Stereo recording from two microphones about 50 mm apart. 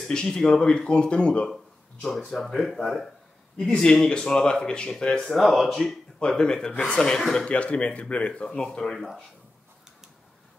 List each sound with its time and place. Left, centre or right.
0.1 s speech: centre
1.5 s a sound: centre
2.2 s speech: centre
5.2 s speech: centre
6.1 s speech: centre
7.4 s speech: left
8.9 s speech: centre